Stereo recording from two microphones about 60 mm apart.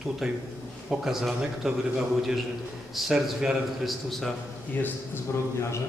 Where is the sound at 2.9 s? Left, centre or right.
Centre.